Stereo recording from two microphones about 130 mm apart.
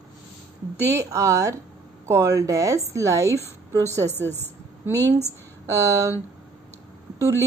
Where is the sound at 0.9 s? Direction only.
25° right (ahead or behind).